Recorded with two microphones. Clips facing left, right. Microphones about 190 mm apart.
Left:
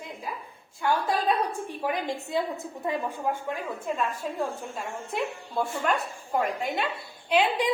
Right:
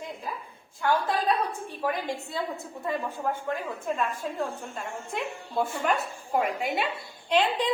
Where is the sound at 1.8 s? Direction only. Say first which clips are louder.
Right 1 dB; 20° left (ahead or behind).